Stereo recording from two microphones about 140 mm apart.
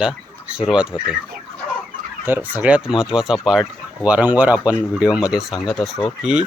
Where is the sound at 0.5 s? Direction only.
5° right (ahead or behind).